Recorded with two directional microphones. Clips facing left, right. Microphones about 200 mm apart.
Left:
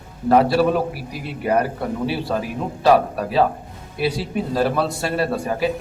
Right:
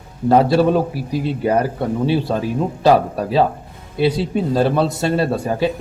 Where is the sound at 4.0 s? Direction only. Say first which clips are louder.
Right 5 dB; 25° right (ahead or behind).